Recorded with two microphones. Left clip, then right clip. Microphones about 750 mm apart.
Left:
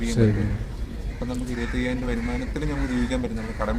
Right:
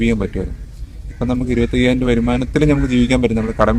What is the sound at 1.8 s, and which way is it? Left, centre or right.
A man's voice, right.